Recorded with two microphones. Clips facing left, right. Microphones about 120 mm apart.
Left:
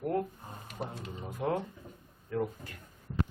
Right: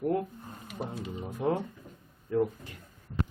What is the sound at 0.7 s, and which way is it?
Speech, 10° right (ahead or behind).